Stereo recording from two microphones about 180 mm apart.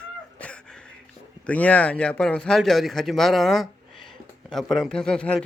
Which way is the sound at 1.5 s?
10° left (ahead or behind).